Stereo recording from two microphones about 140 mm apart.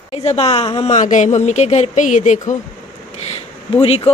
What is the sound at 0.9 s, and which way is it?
Speech, 60° left (ahead or behind).